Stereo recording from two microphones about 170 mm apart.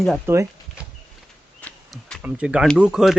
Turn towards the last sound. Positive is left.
turn(degrees=-5)  # may be behind; listen again after turning